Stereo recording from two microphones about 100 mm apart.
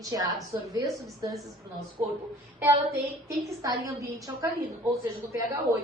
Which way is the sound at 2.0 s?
35° right (ahead or behind).